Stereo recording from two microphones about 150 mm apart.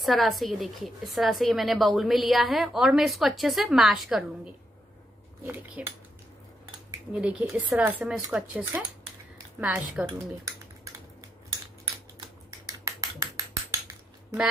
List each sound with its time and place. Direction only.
0.0 s a woman's voice: centre (ahead or behind)
7.1 s speech: 10° right (ahead or behind)
12.8 s a sound: 25° right (ahead or behind)